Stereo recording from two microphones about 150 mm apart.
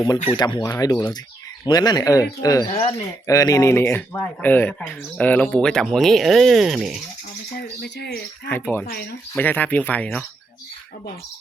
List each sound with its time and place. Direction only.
0.0 s speech: 25° left (ahead or behind); by 7.0 s 5° right (ahead or behind)
7.5 s bird: 90° left
8.4 s speech: 15° left (ahead or behind)